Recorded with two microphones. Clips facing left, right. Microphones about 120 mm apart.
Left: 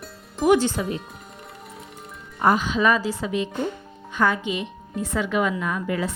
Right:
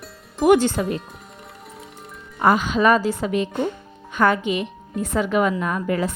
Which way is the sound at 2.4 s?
85° right.